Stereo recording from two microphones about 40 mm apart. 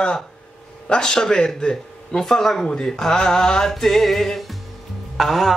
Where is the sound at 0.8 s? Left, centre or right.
Centre.